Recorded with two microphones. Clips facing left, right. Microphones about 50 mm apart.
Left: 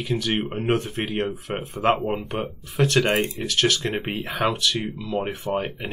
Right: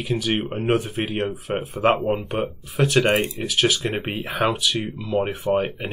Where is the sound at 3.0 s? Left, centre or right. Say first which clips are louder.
Right 2 dB; right.